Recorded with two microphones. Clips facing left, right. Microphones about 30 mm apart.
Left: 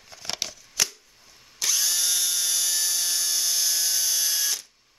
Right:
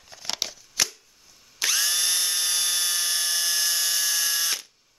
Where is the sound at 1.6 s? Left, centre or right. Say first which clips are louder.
Right 1 dB; right.